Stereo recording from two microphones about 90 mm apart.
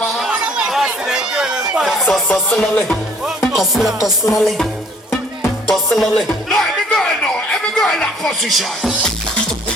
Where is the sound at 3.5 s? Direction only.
5° right (ahead or behind).